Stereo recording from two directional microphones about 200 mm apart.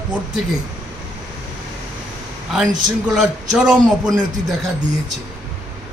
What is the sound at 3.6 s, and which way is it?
Speech, centre (ahead or behind).